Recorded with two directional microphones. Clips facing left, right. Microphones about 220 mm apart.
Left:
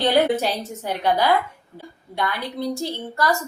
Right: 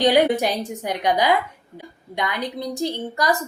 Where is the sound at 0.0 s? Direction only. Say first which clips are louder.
Right 2 dB; 15° right (ahead or behind).